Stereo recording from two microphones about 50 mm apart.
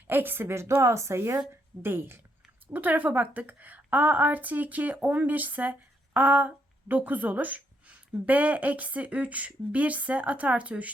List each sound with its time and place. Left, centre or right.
0.1 s a woman's voice: right
1.8 s a woman's voice: right
2.7 s a woman's voice: right